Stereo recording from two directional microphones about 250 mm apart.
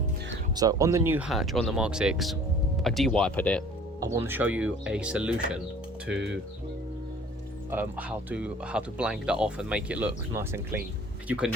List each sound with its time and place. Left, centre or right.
0.5 s speech: centre
4.0 s speech: centre
6.1 s speech: right
7.7 s speech: centre